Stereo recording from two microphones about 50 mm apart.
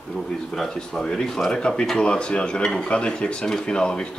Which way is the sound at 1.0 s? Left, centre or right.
Centre.